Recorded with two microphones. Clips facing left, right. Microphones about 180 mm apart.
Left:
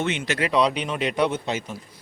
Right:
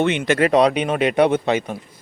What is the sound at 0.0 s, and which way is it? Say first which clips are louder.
Speech: right 8 dB; 60° right (ahead or behind).